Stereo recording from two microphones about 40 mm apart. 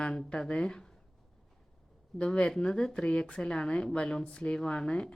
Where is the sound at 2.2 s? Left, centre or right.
Left.